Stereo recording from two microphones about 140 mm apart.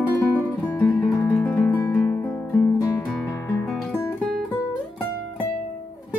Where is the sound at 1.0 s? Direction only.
25° left (ahead or behind).